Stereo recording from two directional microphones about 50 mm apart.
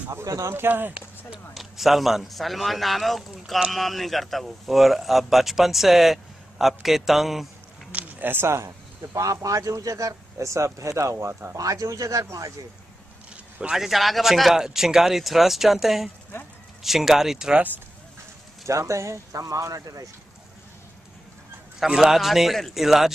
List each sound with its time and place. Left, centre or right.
0.1 s speech: right
0.6 s speech: right
1.5 s speech: centre
7.9 s a sound: right
8.5 s speech: right
11.7 s speech: right
13.7 s speech: centre
18.7 s speech: right
21.7 s speech: centre